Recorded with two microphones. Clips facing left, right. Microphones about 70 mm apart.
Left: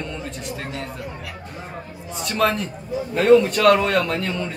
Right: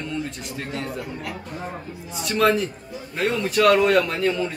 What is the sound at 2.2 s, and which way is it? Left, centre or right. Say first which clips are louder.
A man's voice: right 2 dB; centre.